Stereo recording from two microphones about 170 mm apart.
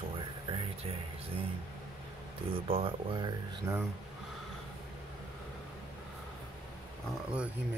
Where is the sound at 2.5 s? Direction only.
30° right (ahead or behind).